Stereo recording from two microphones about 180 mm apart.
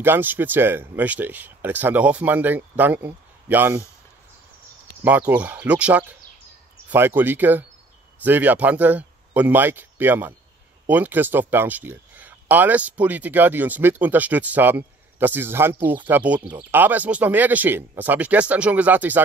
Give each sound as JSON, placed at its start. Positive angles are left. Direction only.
{"t": 0.0, "sound": "speech", "side_deg": -10}
{"t": 5.3, "sound": "speech", "side_deg": -10}
{"t": 16.3, "sound": "speech", "side_deg": -25}
{"t": 16.7, "sound": "speech", "side_deg": -10}